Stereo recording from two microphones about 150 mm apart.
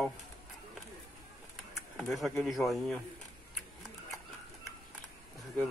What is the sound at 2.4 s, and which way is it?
Speech, centre (ahead or behind).